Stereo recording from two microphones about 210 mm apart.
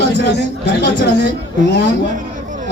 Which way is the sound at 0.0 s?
55° left (ahead or behind).